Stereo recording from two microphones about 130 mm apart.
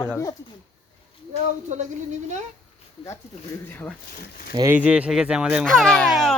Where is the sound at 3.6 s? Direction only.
15° left (ahead or behind).